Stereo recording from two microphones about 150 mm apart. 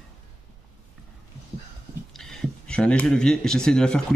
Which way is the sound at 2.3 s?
5° left (ahead or behind).